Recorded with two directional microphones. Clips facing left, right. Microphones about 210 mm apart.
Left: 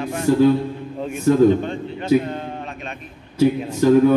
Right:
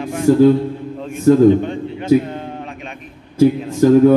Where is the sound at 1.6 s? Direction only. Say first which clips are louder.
Right 3 dB; 15° right (ahead or behind).